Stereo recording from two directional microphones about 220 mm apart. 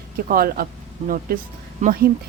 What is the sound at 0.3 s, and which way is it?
Speech, 40° right (ahead or behind).